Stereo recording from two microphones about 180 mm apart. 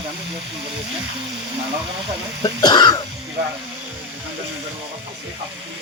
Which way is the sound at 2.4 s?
25° left (ahead or behind).